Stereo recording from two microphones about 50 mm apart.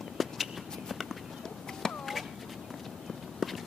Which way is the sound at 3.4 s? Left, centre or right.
Centre.